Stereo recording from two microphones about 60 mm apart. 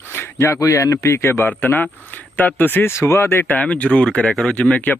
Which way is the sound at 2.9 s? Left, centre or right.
Left.